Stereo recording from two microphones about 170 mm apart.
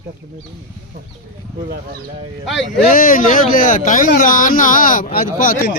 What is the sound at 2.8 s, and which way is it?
Speech, 55° left (ahead or behind).